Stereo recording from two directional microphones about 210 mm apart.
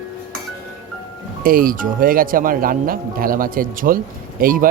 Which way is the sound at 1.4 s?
45° right (ahead or behind).